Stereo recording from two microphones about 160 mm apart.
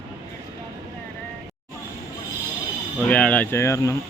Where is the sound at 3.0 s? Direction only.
10° left (ahead or behind).